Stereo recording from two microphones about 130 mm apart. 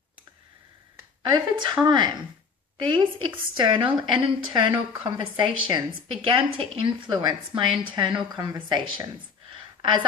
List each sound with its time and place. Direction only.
1.3 s a woman's voice: 35° right (ahead or behind)